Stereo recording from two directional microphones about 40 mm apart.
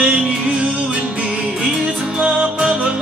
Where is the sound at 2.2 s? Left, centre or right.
Right.